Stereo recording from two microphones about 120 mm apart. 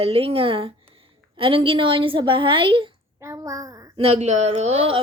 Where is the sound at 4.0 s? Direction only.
65° right (ahead or behind).